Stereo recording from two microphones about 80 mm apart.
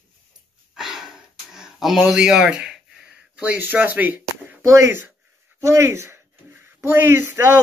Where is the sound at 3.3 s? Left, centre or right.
Right.